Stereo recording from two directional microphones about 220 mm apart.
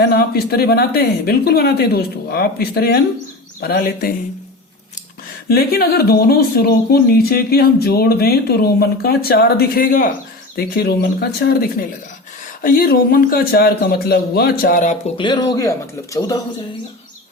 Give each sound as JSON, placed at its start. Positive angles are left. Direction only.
{"t": 0.0, "sound": "speech", "side_deg": 45}
{"t": 5.5, "sound": "speech", "side_deg": 45}
{"t": 15.2, "sound": "speech", "side_deg": 20}